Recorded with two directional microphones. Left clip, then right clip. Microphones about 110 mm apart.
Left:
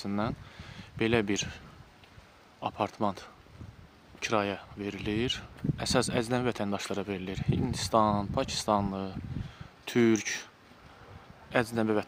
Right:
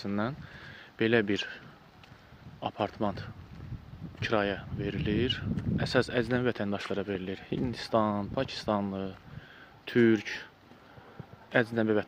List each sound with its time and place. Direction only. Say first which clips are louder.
0.0 s speech: even; 25° left (ahead or behind)
11.5 s speech: right 1 dB; 25° left (ahead or behind)